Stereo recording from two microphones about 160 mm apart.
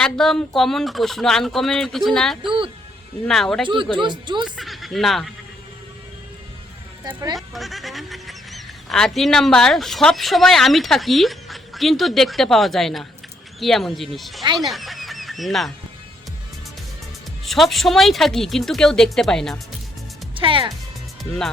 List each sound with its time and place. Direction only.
0.0 s speech: 5° left (ahead or behind)
3.9 s speech: 30° right (ahead or behind)
4.4 s speech: centre (ahead or behind)
7.1 s speech: 20° right (ahead or behind)
7.3 s speech: centre (ahead or behind)
17.4 s speech: centre (ahead or behind)
20.3 s speech: 35° right (ahead or behind)